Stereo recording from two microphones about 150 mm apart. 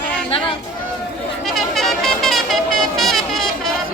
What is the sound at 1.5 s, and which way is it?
Music, centre (ahead or behind).